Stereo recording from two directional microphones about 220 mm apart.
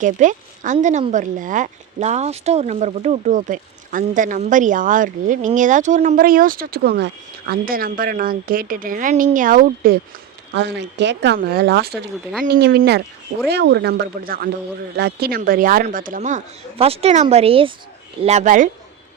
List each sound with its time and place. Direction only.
0.0 s speech: 35° right (ahead or behind)
10.5 s speech: 50° right (ahead or behind); by 18.7 s 35° right (ahead or behind)